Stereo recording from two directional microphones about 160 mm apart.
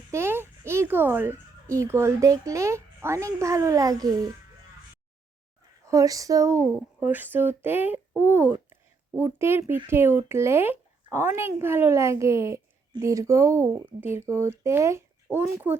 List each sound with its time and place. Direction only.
0.1 s a child's voice: 15° right (ahead or behind)
5.8 s speech: 20° right (ahead or behind)